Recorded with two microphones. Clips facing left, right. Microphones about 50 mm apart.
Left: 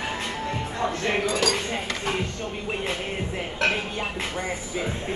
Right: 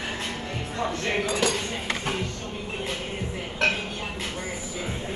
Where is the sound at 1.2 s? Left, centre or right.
Centre.